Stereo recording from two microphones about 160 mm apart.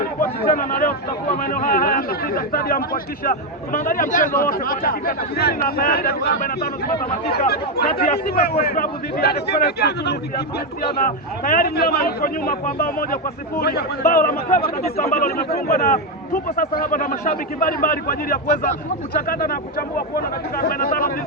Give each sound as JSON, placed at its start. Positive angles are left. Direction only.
{"t": 0.0, "sound": "a sound", "side_deg": 60}
{"t": 1.4, "sound": "a man's voice", "side_deg": 60}
{"t": 11.0, "sound": "speech", "side_deg": 60}
{"t": 13.6, "sound": "a man's voice", "side_deg": 80}